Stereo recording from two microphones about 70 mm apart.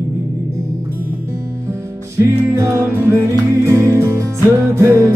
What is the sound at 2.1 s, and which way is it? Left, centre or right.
Music, right.